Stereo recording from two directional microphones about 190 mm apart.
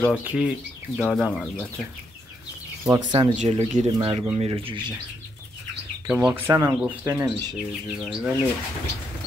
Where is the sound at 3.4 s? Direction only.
35° right (ahead or behind).